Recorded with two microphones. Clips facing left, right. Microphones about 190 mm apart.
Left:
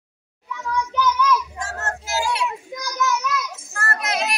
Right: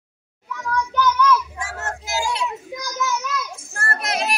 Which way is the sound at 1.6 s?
10° right (ahead or behind).